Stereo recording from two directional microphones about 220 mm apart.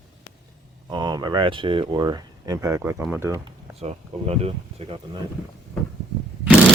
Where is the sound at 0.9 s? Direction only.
20° right (ahead or behind).